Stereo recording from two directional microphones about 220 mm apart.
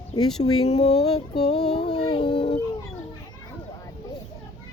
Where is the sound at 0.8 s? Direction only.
30° left (ahead or behind).